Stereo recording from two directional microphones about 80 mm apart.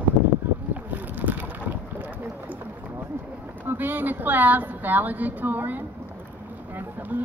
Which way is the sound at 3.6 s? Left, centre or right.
Right.